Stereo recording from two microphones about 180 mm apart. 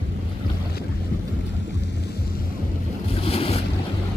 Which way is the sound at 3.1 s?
35° left (ahead or behind).